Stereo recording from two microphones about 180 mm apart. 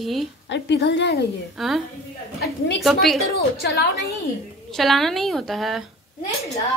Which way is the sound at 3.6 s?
60° left (ahead or behind).